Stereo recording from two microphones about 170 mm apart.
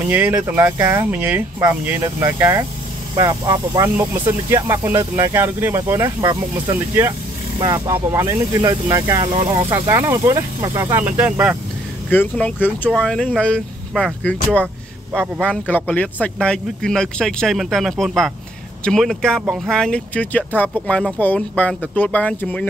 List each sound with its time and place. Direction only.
0.1 s speech: 10° right (ahead or behind); by 3.9 s 25° right (ahead or behind)
3.9 s speech: 15° right (ahead or behind)
7.5 s speech: 25° right (ahead or behind)
9.6 s speech: 15° right (ahead or behind)
12.1 s speech: 10° left (ahead or behind)